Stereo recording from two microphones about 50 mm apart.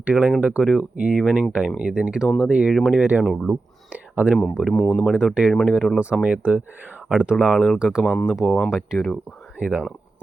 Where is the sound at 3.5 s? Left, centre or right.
Right.